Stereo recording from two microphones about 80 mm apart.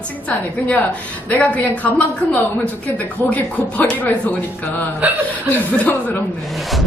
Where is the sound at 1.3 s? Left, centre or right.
Centre.